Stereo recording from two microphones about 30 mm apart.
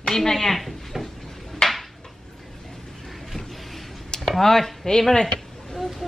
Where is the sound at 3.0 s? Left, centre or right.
Centre.